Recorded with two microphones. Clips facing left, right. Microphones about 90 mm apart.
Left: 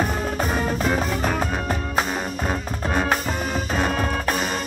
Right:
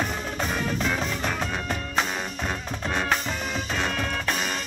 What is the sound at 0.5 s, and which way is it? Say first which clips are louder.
Music: left 4 dB; 40° left (ahead or behind).